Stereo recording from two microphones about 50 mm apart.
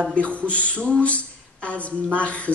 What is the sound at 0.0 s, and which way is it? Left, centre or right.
A woman's voice, left.